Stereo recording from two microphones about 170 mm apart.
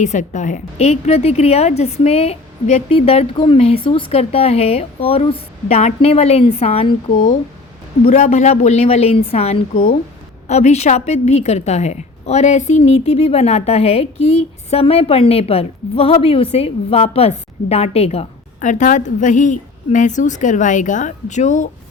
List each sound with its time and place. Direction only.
0.0 s a woman's voice: 45° left (ahead or behind)
7.1 s a woman's voice: 50° left (ahead or behind)